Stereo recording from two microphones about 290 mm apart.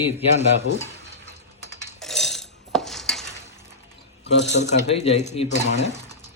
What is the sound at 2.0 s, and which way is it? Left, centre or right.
Dishes, centre.